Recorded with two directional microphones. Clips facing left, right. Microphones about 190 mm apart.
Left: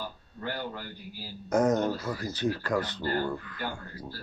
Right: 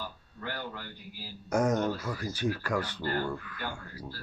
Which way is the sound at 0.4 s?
35° left (ahead or behind).